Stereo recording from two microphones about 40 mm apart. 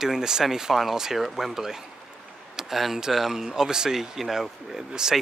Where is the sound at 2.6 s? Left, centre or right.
Centre.